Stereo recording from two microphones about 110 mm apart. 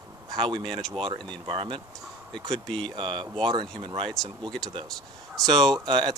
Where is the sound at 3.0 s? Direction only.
50° right (ahead or behind).